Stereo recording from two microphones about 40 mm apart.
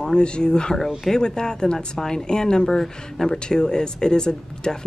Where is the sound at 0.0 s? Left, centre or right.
Left.